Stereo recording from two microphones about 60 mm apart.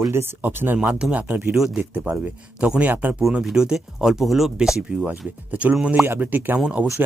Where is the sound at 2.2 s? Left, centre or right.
Right.